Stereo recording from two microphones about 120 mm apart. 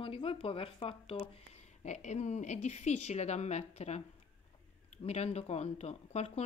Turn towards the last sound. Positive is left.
turn(degrees=65)  # may be behind; listen again after turning